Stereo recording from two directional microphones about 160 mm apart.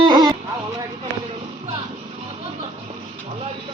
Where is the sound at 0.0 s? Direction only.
25° right (ahead or behind).